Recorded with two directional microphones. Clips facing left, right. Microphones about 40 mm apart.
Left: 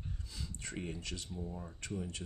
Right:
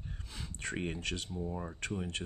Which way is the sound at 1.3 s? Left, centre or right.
Right.